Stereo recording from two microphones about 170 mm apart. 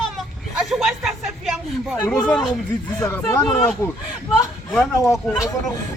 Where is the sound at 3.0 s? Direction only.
15° left (ahead or behind).